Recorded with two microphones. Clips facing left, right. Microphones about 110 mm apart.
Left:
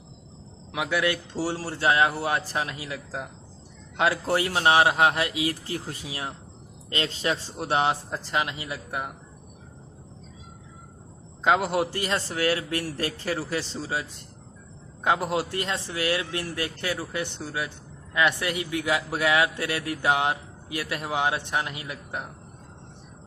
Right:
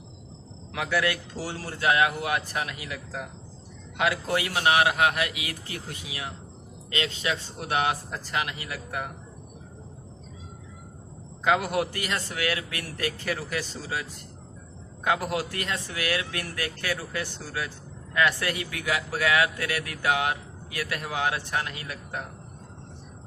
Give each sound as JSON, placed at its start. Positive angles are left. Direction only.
{"t": 0.7, "sound": "a man's voice", "side_deg": 20}
{"t": 11.4, "sound": "a man's voice", "side_deg": 25}